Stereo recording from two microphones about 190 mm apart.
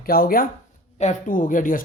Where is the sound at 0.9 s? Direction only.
35° left (ahead or behind).